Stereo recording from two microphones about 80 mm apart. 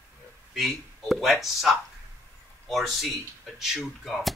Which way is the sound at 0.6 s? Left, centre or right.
Centre.